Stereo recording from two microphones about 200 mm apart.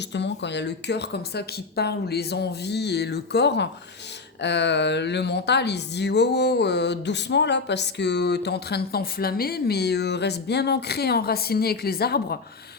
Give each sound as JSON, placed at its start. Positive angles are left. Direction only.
{"t": 0.1, "sound": "speech", "side_deg": 60}